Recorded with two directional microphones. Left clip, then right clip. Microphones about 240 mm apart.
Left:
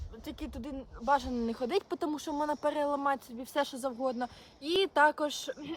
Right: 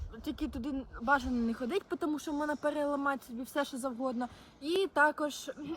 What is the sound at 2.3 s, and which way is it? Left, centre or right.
Speech, centre.